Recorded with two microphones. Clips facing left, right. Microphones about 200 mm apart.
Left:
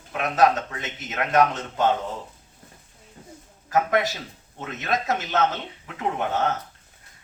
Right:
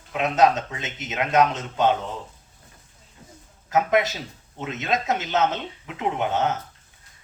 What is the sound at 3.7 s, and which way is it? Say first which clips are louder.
A man's voice: right 1 dB; 20° right (ahead or behind).